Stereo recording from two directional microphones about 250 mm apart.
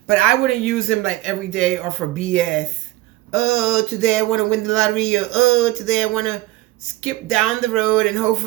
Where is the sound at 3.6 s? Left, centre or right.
Centre.